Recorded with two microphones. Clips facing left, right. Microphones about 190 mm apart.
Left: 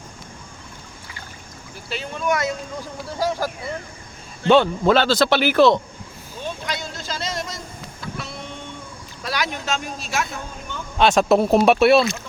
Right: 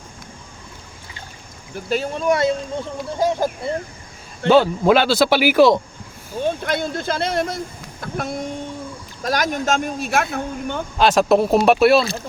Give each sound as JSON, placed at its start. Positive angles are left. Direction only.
{"t": 1.9, "sound": "speech", "side_deg": -35}
{"t": 4.4, "sound": "speech", "side_deg": -5}
{"t": 6.4, "sound": "speech", "side_deg": -55}
{"t": 10.9, "sound": "speech", "side_deg": 0}